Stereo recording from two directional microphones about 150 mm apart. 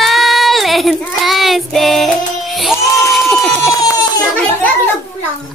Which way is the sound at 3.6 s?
25° left (ahead or behind).